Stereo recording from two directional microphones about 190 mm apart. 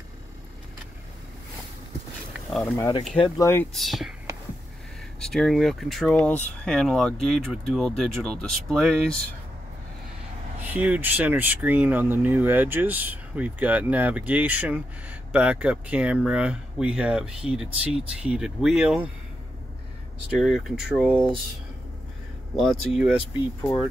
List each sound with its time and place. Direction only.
2.5 s speech: 10° left (ahead or behind)
3.7 s speech: centre (ahead or behind)
5.2 s speech: centre (ahead or behind)
10.6 s speech: 10° right (ahead or behind)
20.3 s speech: centre (ahead or behind)
22.6 s speech: centre (ahead or behind)